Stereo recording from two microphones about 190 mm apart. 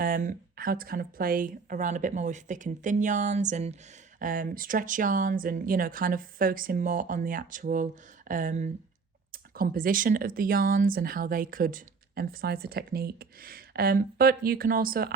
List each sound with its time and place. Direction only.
0.0 s speech: 45° right (ahead or behind)